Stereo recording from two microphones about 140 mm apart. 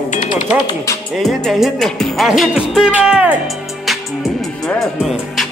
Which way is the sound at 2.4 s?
Centre (ahead or behind).